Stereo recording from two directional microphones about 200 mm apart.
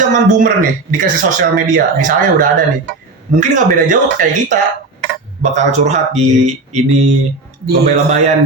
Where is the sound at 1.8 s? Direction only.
45° right (ahead or behind).